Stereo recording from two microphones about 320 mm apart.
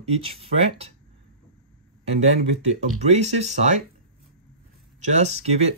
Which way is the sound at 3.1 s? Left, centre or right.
Right.